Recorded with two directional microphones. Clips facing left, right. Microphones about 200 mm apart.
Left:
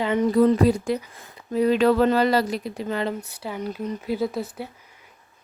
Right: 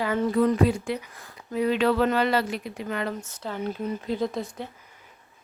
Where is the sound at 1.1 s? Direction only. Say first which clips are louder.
Left 4 dB; 25° left (ahead or behind).